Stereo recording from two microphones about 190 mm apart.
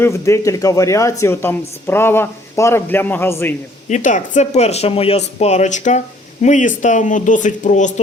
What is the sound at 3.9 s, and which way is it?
Speech, 40° left (ahead or behind).